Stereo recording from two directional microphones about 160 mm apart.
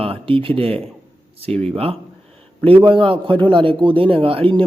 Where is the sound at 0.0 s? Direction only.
35° right (ahead or behind).